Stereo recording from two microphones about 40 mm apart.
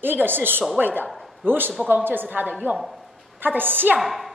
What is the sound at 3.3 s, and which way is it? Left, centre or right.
Speech, right.